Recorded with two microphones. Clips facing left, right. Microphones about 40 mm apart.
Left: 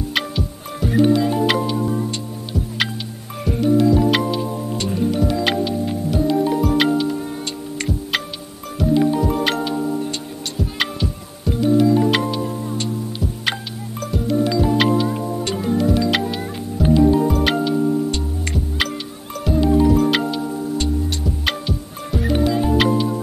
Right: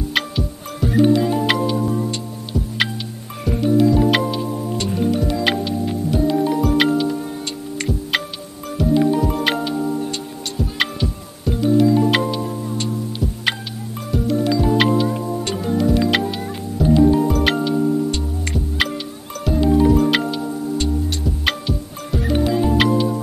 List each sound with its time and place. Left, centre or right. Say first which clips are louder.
0.1 s music: right 2 dB; centre